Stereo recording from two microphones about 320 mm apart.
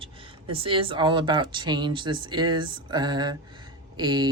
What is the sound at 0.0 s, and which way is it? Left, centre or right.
Speech, centre.